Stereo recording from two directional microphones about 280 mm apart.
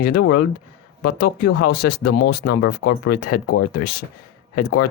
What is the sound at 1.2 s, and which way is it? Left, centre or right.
Speech, left.